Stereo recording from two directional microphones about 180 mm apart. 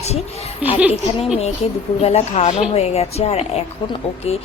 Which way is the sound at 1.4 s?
35° left (ahead or behind).